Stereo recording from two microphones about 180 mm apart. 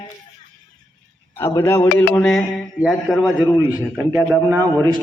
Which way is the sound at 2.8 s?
5° right (ahead or behind).